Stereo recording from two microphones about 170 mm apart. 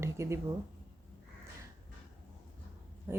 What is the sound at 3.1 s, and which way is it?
Speech, 15° right (ahead or behind).